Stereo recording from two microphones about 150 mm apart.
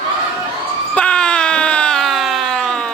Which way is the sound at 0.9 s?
5° left (ahead or behind).